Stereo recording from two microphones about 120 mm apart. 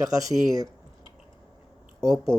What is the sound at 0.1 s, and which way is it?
Speech, 30° right (ahead or behind).